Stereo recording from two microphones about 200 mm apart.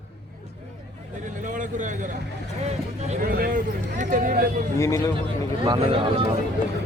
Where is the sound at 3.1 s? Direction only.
45° right (ahead or behind).